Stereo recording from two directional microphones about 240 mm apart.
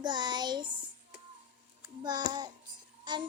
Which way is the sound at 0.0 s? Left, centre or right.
Centre.